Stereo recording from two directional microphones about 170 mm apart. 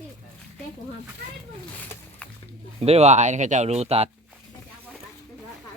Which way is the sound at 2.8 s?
40° right (ahead or behind).